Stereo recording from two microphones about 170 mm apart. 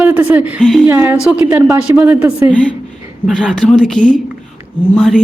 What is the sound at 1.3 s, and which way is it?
A woman's voice, 10° right (ahead or behind).